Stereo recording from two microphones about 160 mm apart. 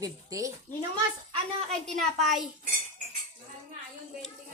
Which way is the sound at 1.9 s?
Centre (ahead or behind).